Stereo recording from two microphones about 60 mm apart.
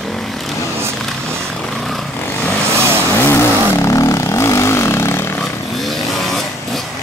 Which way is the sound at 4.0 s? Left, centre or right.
Left.